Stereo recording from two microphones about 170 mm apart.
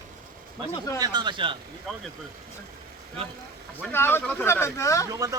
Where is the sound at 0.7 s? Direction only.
20° left (ahead or behind).